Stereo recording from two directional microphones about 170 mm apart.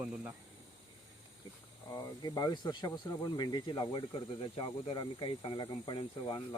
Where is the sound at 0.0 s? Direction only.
5° right (ahead or behind).